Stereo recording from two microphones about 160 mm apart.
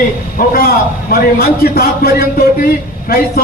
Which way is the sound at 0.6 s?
65° left (ahead or behind).